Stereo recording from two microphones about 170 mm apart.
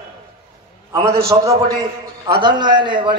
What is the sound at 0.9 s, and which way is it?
A man's voice, 20° right (ahead or behind).